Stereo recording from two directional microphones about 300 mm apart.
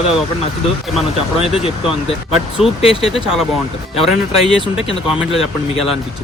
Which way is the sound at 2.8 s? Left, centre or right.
Centre.